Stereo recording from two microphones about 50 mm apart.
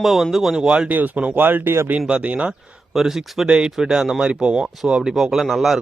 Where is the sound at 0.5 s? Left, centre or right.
Centre.